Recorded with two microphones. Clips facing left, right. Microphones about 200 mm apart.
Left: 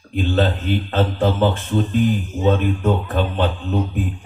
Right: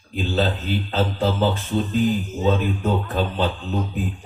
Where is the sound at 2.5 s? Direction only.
50° left (ahead or behind).